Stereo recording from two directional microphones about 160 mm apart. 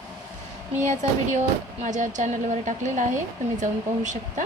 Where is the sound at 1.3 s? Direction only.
50° right (ahead or behind).